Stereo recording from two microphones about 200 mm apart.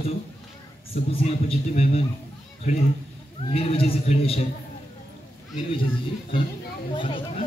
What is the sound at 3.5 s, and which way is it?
Speech, 30° left (ahead or behind).